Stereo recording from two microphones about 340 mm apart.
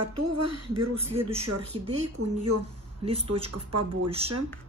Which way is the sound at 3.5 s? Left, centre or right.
Right.